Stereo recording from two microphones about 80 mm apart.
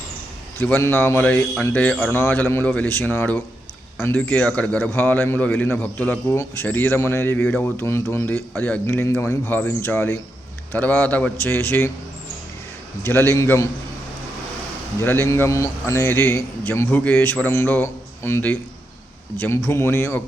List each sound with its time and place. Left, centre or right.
0.8 s a man's voice: left
1.2 s speech: centre
6.3 s a man's voice: left
6.7 s speech: left
7.8 s a man's voice: left
13.0 s a man's voice: left
14.9 s a man's voice: left